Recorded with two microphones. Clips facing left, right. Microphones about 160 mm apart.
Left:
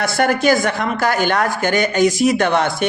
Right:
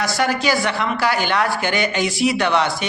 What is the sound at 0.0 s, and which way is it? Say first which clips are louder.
Speech: left 4 dB; 55° left (ahead or behind).